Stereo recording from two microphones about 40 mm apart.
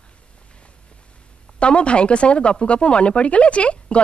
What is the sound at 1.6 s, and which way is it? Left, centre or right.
Speech, left.